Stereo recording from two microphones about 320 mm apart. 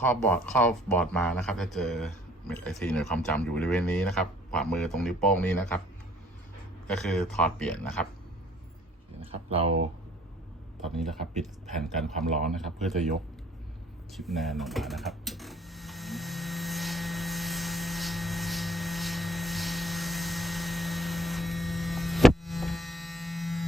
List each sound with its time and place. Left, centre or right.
0.0 s speech: centre
6.8 s speech: centre
9.2 s speech: centre
10.8 s speech: centre
14.1 s a sound: centre